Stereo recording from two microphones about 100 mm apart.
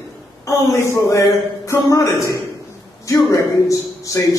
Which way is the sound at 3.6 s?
35° left (ahead or behind).